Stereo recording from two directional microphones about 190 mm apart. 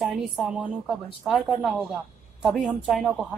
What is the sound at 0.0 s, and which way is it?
A man's voice, centre (ahead or behind).